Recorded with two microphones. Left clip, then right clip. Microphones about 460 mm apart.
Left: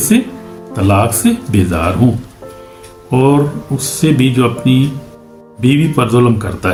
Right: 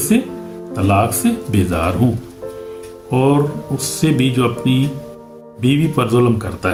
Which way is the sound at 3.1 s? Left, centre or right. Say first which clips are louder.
Left 3 dB; right.